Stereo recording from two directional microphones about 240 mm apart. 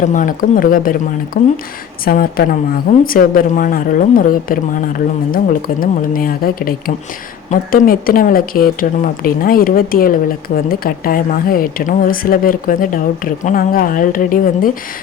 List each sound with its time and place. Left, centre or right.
0.0 s speech: left